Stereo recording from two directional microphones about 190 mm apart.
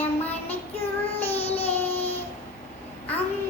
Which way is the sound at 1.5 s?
30° left (ahead or behind).